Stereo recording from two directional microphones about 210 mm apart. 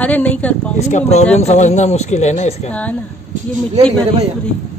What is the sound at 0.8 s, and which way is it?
Speech, 35° left (ahead or behind).